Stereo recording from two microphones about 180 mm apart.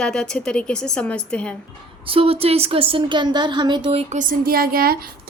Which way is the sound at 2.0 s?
30° right (ahead or behind).